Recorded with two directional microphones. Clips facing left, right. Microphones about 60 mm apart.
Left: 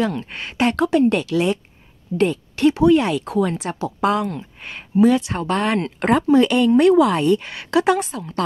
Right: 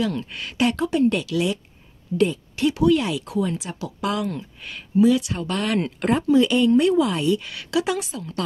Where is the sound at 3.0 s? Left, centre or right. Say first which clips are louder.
Left 4 dB; left.